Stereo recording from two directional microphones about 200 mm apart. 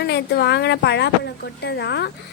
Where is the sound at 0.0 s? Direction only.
55° left (ahead or behind).